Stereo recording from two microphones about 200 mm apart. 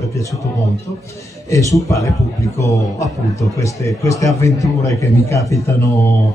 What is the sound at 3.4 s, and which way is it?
A man's voice, 15° left (ahead or behind).